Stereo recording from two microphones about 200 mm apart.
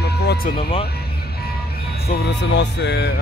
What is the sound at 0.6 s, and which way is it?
Speech, 25° left (ahead or behind).